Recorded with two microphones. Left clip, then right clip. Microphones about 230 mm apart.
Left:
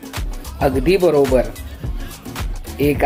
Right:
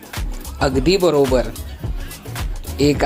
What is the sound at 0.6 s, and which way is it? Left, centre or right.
Speech, right.